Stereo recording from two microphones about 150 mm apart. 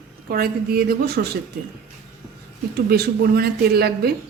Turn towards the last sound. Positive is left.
turn(degrees=-90)